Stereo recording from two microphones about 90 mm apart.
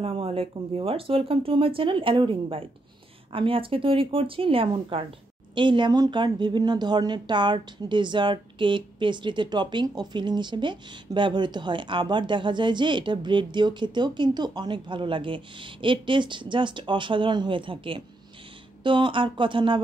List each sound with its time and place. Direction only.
0.0 s speech: 90° right
5.5 s speech: 60° right (ahead or behind)